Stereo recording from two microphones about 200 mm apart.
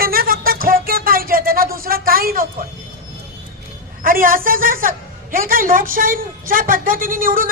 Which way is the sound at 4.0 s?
45° right (ahead or behind).